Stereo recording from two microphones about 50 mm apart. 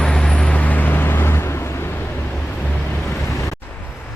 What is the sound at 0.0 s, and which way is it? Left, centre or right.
Vehicle, centre.